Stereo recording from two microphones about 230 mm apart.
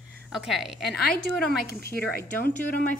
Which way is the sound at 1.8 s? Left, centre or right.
Left.